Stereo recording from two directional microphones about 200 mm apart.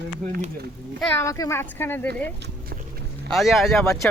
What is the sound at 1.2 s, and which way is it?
Speech, 15° left (ahead or behind).